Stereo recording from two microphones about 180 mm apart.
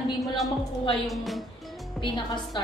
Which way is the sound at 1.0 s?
Centre (ahead or behind).